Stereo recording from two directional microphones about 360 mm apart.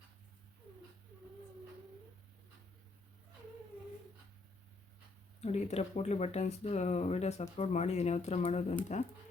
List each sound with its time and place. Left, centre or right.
5.4 s speech: centre